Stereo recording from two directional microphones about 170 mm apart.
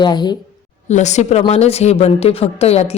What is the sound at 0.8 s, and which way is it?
A woman's voice, 45° left (ahead or behind).